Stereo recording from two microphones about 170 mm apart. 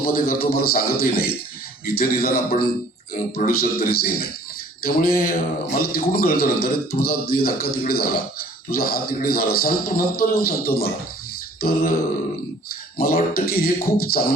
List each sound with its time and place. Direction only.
0.0 s a man's voice: 60° left (ahead or behind)
13.0 s a man's voice: 65° left (ahead or behind)